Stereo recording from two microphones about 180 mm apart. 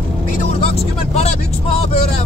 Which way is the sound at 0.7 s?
35° left (ahead or behind).